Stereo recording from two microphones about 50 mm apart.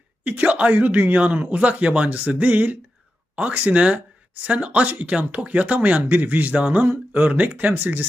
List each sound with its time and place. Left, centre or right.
0.3 s speech: right